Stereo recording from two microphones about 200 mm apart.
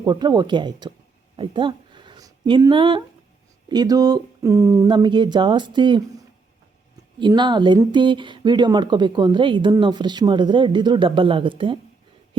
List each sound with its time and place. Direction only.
0.0 s speech: 20° right (ahead or behind)
1.4 s a sound: 25° right (ahead or behind)
3.7 s speech: 20° right (ahead or behind)
7.2 s speech: 25° right (ahead or behind)